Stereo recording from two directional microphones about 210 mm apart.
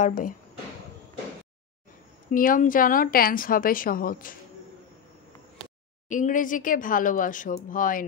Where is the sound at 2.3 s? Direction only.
40° left (ahead or behind).